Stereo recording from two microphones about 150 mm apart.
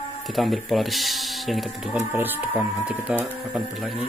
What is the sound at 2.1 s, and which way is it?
Speech, 10° right (ahead or behind).